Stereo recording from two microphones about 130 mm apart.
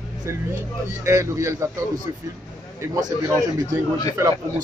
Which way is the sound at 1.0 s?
25° right (ahead or behind).